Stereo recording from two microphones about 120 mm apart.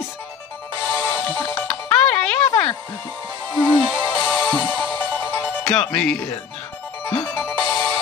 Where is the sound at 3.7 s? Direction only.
15° left (ahead or behind).